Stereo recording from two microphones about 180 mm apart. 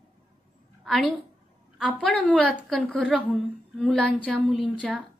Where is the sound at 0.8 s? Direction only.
Centre (ahead or behind).